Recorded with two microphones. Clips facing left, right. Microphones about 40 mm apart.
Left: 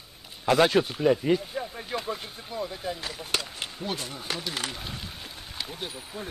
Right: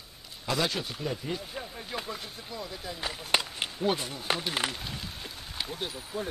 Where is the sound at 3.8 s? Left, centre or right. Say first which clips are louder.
Right 5 dB; centre.